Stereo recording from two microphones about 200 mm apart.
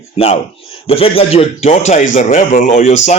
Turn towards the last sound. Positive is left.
turn(degrees=35)  # may be behind; listen again after turning